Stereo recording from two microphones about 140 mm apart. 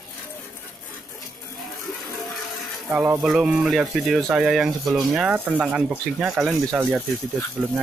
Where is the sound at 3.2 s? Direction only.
Centre (ahead or behind).